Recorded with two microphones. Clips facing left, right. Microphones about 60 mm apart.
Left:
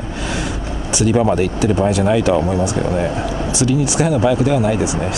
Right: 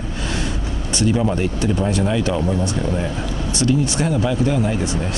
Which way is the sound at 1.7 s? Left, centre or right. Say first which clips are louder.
Left 4 dB; left.